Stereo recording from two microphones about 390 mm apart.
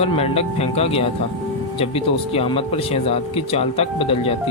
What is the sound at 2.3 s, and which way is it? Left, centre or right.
Speech, centre.